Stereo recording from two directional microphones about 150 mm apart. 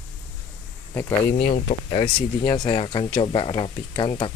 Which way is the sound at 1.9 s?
30° left (ahead or behind).